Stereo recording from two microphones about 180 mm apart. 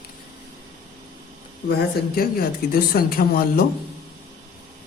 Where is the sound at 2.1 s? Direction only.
55° left (ahead or behind).